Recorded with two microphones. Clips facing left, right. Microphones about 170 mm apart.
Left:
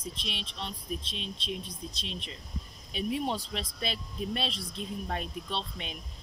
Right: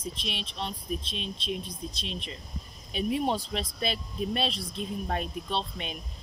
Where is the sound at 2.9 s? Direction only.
55° right (ahead or behind).